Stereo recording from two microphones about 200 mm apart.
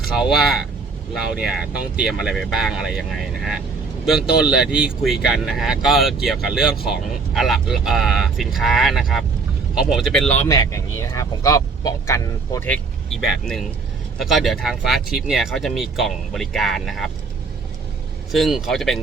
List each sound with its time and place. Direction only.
1.1 s speech: 5° right (ahead or behind)
10.5 s speech: 15° left (ahead or behind); by 17.1 s centre (ahead or behind)
18.3 s speech: centre (ahead or behind)